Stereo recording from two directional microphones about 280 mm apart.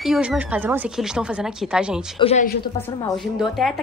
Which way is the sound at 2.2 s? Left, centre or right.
Left.